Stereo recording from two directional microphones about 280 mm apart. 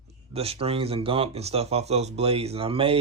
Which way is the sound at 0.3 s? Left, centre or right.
Right.